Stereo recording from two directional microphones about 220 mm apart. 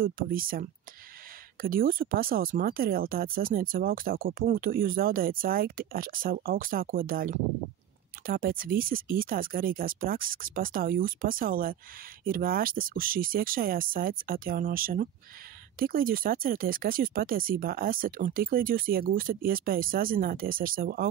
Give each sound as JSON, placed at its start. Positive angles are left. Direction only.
{"t": 0.0, "sound": "speech", "side_deg": -40}